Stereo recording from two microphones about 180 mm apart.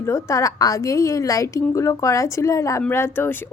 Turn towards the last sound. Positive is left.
turn(degrees=15)  # may be behind; listen again after turning